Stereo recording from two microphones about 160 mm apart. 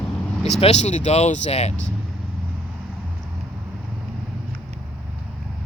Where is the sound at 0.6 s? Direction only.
45° left (ahead or behind).